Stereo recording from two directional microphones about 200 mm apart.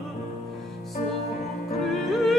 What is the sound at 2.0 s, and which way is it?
Music, centre (ahead or behind).